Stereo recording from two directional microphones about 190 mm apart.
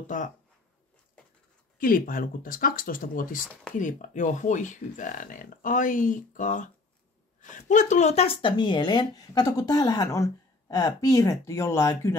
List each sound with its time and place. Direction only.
0.0 s speech: 40° left (ahead or behind)
1.8 s speech: 50° left (ahead or behind); by 12.2 s 15° left (ahead or behind)